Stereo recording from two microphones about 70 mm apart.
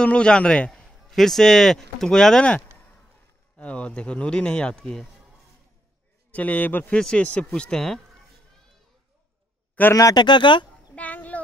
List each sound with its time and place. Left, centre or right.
0.0 s a man's voice: centre
6.3 s a man's voice: left
7.0 s speech: centre
9.8 s a man's voice: left
10.1 s speech: left
11.0 s a sound: left